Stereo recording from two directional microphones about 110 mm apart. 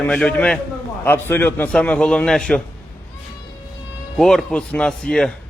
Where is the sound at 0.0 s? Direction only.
10° left (ahead or behind).